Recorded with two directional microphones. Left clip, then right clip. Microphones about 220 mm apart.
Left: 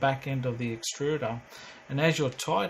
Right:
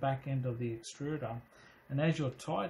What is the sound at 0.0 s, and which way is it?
Speech, 30° left (ahead or behind).